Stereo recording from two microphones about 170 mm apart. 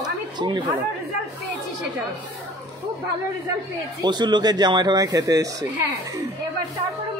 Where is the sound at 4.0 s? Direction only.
25° right (ahead or behind).